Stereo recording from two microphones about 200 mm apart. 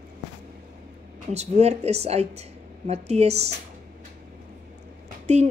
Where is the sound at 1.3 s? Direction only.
35° right (ahead or behind).